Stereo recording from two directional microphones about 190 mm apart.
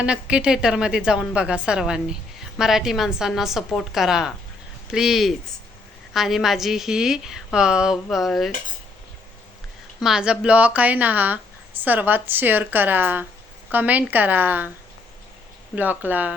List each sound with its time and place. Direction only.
0.0 s a woman's voice: 5° right (ahead or behind)
10.0 s speech: 5° right (ahead or behind)
15.7 s speech: 10° right (ahead or behind)